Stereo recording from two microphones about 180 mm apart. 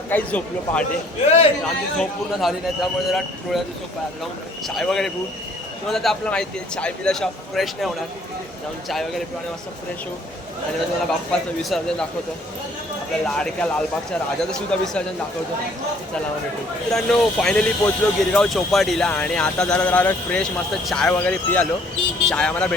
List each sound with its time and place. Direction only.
0.1 s speech: 10° left (ahead or behind)
1.2 s a man's voice: 35° left (ahead or behind)
1.6 s speech: centre (ahead or behind)
4.7 s speech: centre (ahead or behind)
11.3 s speech: 5° left (ahead or behind)
13.2 s speech: 5° left (ahead or behind)
16.9 s speech: 5° left (ahead or behind)